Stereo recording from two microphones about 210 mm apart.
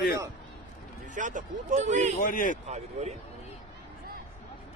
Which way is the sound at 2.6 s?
35° right (ahead or behind).